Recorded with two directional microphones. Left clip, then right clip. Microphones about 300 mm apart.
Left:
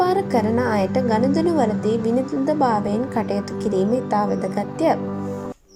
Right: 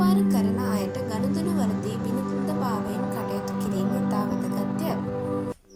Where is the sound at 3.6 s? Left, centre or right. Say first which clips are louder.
Left 8 dB; left.